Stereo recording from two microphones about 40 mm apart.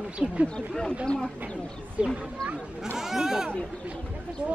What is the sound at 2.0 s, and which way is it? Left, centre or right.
Speech, right.